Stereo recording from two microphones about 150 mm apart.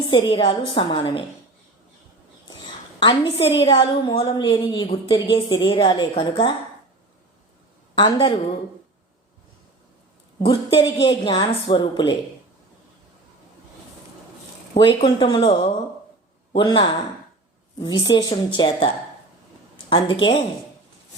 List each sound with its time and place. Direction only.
0.1 s a woman's voice: 35° left (ahead or behind)
3.0 s a woman's voice: 35° left (ahead or behind)
7.9 s a woman's voice: 35° left (ahead or behind)
10.4 s a woman's voice: 35° left (ahead or behind)
14.7 s a woman's voice: 35° left (ahead or behind)
19.9 s a woman's voice: 35° left (ahead or behind)